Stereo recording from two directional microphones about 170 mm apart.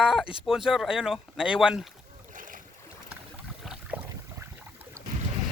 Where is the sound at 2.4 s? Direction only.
55° right (ahead or behind).